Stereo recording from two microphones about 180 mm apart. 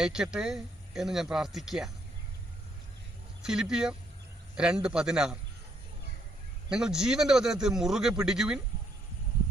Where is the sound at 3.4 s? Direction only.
5° right (ahead or behind).